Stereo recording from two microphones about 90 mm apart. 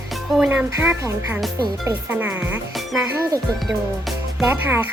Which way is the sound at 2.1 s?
20° right (ahead or behind).